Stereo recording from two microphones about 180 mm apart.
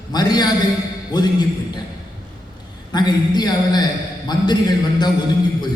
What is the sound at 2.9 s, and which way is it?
Speech, 25° left (ahead or behind).